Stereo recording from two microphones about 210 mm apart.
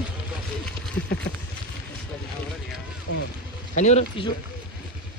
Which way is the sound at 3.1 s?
90° left.